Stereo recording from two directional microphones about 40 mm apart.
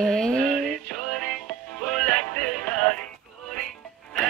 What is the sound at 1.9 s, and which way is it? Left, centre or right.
Music, left.